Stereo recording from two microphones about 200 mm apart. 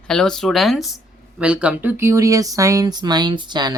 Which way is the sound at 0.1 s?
5° left (ahead or behind).